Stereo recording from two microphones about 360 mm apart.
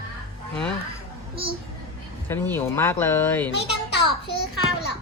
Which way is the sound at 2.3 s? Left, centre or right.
Centre.